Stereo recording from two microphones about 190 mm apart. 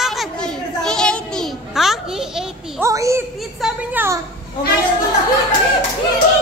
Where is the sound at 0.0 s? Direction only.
Centre (ahead or behind).